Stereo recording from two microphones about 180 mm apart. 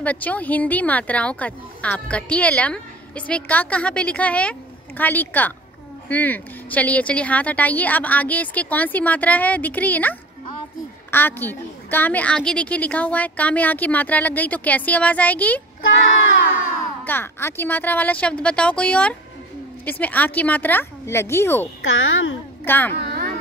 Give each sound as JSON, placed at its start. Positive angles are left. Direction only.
{"t": 0.0, "sound": "a woman's voice", "side_deg": 10}
{"t": 17.0, "sound": "a woman's voice", "side_deg": 10}
{"t": 21.8, "sound": "a child's voice", "side_deg": 90}
{"t": 22.7, "sound": "a woman's voice", "side_deg": 10}
{"t": 22.9, "sound": "a sound", "side_deg": -60}